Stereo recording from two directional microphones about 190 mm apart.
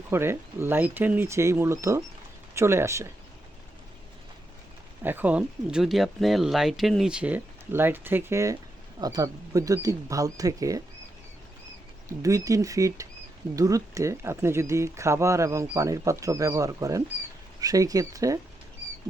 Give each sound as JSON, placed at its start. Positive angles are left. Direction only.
{"t": 0.1, "sound": "speech", "side_deg": -15}
{"t": 5.0, "sound": "speech", "side_deg": -10}
{"t": 12.0, "sound": "speech", "side_deg": -15}